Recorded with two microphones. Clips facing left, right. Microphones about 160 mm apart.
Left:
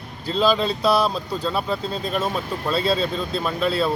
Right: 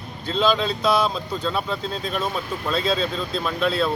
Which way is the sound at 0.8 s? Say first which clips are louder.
Left 1 dB; 35° left (ahead or behind).